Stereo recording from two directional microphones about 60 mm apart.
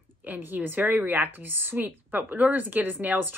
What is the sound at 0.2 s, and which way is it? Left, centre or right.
A woman's voice, right.